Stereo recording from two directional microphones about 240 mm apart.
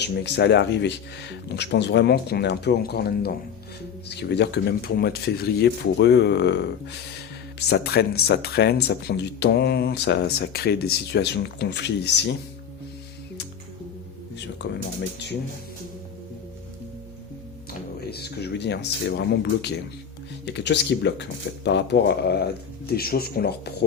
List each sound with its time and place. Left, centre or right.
0.0 s speech: left
14.3 s music: left
17.7 s speech: left